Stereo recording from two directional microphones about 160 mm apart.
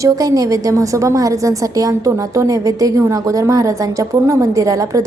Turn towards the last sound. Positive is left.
turn(degrees=-20)  # may be behind; listen again after turning